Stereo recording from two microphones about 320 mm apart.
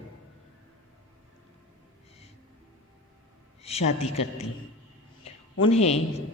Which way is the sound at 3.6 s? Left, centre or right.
Centre.